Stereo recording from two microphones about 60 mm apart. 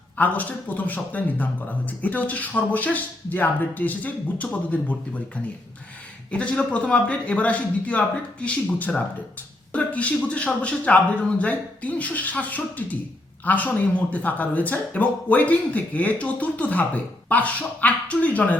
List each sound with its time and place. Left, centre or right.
0.2 s speech: left
6.3 s speech: centre